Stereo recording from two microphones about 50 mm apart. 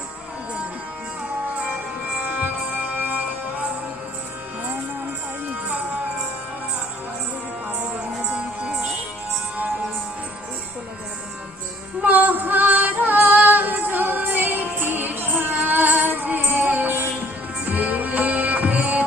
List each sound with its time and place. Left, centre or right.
2.2 s music: right
8.3 s music: centre
12.0 s female singing: right
17.7 s music: right